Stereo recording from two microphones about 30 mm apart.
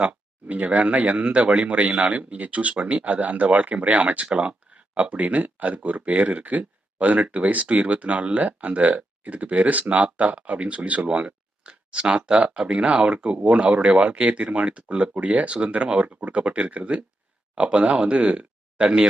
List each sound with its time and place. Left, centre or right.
0.0 s speech: right
4.3 s speech: right
11.9 s speech: right
15.1 s speech: right
17.6 s speech: right